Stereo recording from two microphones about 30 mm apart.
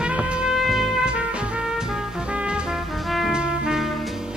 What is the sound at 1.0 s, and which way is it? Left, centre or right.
Music, right.